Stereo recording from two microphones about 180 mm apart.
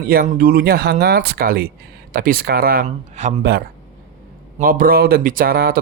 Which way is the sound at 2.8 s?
40° right (ahead or behind).